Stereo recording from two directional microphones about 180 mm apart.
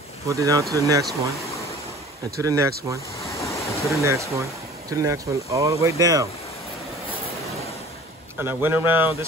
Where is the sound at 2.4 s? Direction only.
15° right (ahead or behind).